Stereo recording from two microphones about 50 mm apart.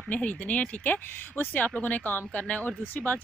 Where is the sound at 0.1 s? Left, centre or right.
Left.